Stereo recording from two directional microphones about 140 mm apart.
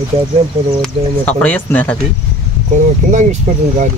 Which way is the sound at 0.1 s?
40° right (ahead or behind).